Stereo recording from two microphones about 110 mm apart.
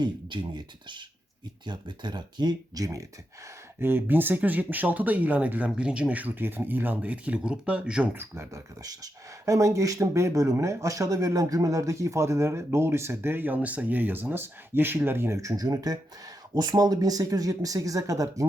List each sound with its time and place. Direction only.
0.0 s speech: 45° right (ahead or behind)
3.8 s speech: 20° right (ahead or behind)
8.1 s speech: 25° right (ahead or behind)